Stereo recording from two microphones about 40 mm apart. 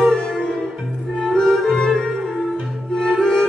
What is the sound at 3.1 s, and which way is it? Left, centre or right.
Music, centre.